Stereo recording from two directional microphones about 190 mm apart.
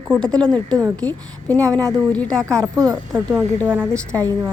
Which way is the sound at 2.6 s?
20° right (ahead or behind).